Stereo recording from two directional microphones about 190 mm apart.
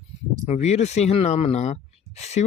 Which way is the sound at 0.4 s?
35° left (ahead or behind).